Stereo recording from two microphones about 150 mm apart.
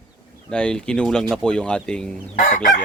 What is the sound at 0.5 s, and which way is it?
Speech, 5° left (ahead or behind).